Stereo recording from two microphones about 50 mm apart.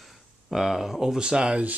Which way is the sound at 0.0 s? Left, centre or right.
Centre.